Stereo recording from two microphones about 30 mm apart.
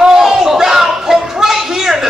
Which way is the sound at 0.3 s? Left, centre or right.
Centre.